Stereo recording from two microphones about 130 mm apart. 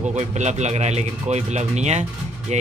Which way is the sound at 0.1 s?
60° right (ahead or behind).